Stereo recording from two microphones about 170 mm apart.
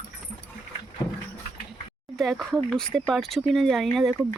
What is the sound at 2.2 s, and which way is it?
A woman's voice, centre (ahead or behind).